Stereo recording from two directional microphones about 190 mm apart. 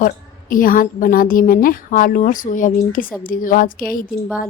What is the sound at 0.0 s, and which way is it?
A woman's voice, 45° left (ahead or behind).